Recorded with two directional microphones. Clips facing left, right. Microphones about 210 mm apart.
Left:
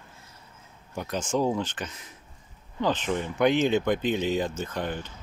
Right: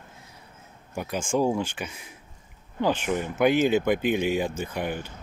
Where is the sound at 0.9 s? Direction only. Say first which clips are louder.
Right 1 dB; 10° right (ahead or behind).